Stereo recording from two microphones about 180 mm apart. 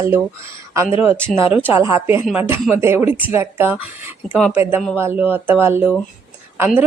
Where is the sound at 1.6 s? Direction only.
15° right (ahead or behind).